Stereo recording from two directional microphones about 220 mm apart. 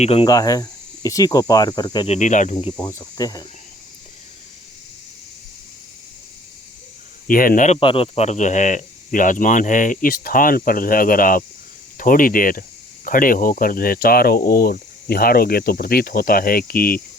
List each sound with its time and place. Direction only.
0.0 s speech: 25° left (ahead or behind)
2.1 s speech: 35° left (ahead or behind)
2.7 s speech: 15° left (ahead or behind)
7.3 s speech: 40° left (ahead or behind)